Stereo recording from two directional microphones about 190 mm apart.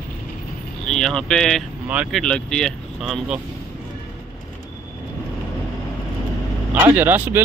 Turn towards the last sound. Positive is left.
turn(degrees=-10)  # may be behind; listen again after turning